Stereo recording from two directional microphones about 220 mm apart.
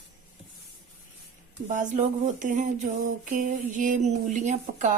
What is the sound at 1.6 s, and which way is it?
A woman's voice, 35° right (ahead or behind).